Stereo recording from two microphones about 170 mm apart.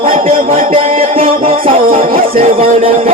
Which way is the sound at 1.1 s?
35° right (ahead or behind).